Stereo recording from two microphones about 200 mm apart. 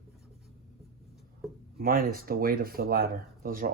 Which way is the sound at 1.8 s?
45° right (ahead or behind).